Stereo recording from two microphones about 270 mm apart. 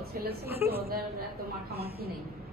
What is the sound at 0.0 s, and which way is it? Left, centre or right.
Speech, right.